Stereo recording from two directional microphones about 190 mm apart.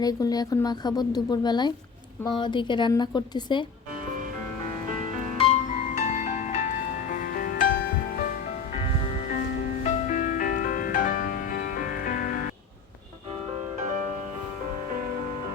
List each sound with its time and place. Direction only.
0.0 s a woman's voice: 20° left (ahead or behind)
5.4 s music: 35° left (ahead or behind)
9.3 s music: 40° left (ahead or behind)